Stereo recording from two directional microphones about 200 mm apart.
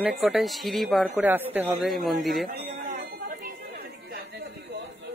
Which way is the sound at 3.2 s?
50° right (ahead or behind).